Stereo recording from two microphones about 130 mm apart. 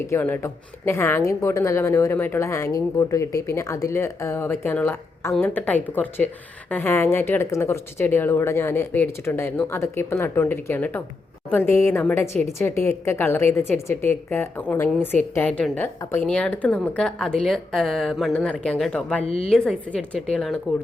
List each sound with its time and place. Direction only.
0.1 s a woman's voice: 15° left (ahead or behind)